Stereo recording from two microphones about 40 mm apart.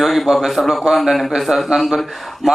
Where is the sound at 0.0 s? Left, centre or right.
Centre.